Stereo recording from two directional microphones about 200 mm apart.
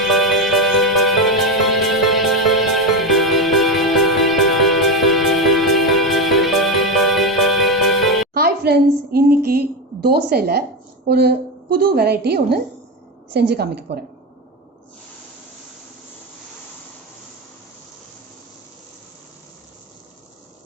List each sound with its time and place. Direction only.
0.0 s music: centre (ahead or behind)
8.3 s music: 50° right (ahead or behind)
9.1 s a sound: 50° right (ahead or behind)
11.0 s a woman's voice: 55° right (ahead or behind)